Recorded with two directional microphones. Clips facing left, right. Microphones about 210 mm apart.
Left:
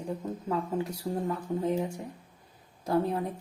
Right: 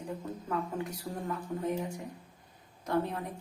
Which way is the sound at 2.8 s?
30° left (ahead or behind).